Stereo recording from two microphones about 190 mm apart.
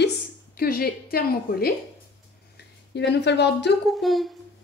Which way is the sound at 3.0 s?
65° left (ahead or behind).